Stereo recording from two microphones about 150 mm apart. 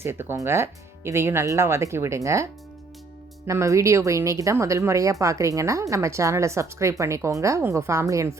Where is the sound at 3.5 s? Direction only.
20° right (ahead or behind).